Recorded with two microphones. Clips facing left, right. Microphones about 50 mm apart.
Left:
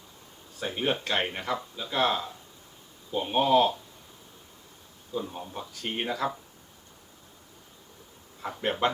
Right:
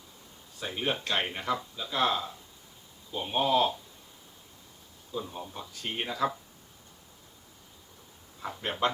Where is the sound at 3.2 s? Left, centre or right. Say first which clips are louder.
Left 3 dB; centre.